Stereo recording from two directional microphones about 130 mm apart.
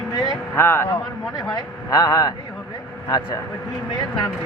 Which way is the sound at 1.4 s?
30° left (ahead or behind).